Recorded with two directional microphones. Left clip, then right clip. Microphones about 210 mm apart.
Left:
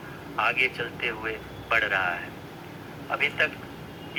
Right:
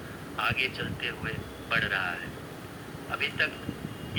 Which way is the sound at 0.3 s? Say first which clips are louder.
Left 5 dB; 20° left (ahead or behind).